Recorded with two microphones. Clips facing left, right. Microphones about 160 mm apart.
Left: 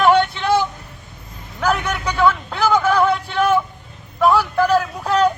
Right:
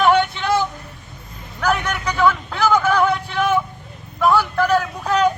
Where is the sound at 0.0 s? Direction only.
5° left (ahead or behind).